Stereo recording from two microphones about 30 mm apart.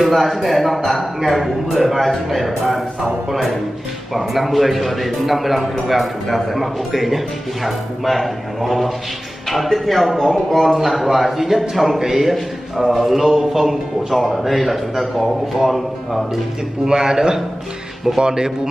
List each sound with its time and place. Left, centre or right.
0.0 s a man's voice: centre
4.1 s a man's voice: centre
16.8 s a man's voice: right